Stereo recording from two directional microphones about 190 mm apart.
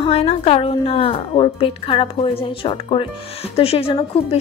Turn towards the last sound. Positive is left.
turn(degrees=30)  # may be behind; listen again after turning